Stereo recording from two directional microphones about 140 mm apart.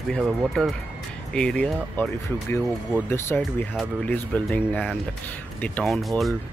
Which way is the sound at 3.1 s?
15° left (ahead or behind).